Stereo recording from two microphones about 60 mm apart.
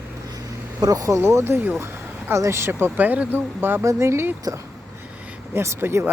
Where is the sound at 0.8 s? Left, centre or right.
Right.